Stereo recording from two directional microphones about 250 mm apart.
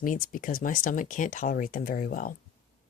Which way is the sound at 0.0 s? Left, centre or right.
Left.